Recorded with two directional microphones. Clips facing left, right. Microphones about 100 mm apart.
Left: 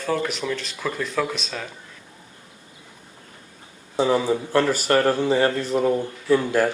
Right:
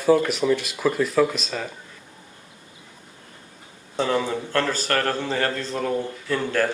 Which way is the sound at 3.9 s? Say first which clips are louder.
Left 3 dB; 15° left (ahead or behind).